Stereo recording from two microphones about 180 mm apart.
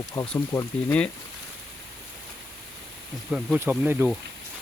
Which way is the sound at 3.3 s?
5° right (ahead or behind).